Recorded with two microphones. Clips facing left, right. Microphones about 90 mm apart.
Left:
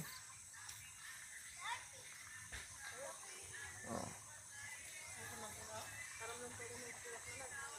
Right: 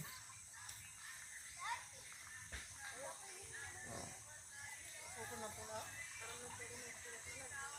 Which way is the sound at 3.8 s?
30° left (ahead or behind).